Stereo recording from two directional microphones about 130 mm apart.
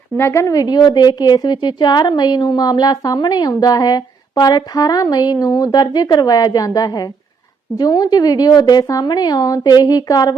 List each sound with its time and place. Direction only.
0.2 s a woman's voice: 20° left (ahead or behind)